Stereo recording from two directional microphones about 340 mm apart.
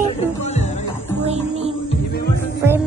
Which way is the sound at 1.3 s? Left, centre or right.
Centre.